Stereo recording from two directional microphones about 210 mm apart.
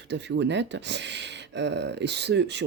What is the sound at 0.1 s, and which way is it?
Speech, 55° right (ahead or behind).